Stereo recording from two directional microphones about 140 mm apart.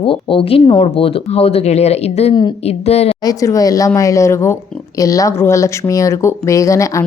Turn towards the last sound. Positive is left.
turn(degrees=20)  # may be behind; listen again after turning